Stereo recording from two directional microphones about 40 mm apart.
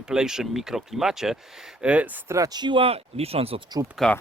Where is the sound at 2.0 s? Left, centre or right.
Right.